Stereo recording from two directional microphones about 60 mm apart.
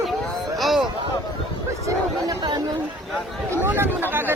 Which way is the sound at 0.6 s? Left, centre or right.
Centre.